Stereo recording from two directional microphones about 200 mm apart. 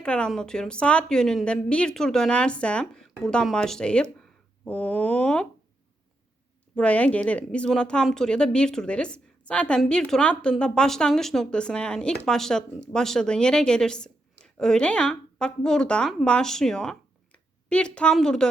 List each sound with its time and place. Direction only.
0.0 s speech: 5° left (ahead or behind)
6.7 s a woman's voice: 5° left (ahead or behind)